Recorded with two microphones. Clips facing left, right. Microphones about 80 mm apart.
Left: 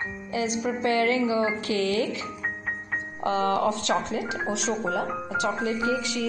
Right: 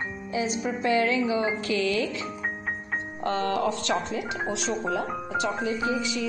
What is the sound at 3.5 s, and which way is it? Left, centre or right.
Speech, left.